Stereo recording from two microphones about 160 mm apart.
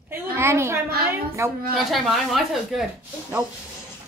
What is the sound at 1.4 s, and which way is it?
Speech, 15° right (ahead or behind).